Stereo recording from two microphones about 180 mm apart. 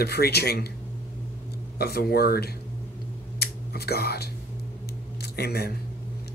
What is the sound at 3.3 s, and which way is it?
Whispering, 60° left (ahead or behind).